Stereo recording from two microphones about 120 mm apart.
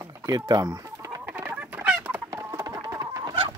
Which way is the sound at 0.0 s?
30° right (ahead or behind).